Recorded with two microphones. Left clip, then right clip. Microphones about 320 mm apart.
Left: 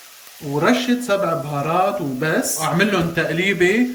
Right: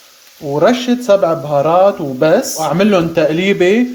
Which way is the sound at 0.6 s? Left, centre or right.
Centre.